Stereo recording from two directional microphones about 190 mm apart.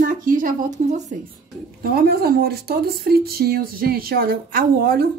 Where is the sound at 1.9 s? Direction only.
55° right (ahead or behind).